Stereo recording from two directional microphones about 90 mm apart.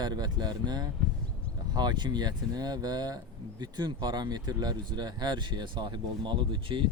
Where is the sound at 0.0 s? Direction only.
50° right (ahead or behind).